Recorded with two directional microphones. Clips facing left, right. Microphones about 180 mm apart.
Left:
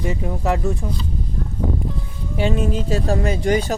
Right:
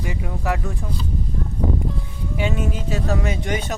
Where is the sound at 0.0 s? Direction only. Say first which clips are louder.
Left 4 dB; 30° left (ahead or behind).